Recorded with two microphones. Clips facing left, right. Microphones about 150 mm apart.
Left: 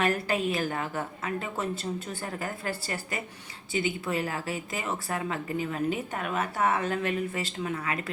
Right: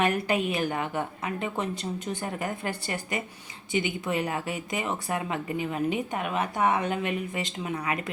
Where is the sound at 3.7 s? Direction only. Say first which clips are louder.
Right 1 dB; 35° left (ahead or behind).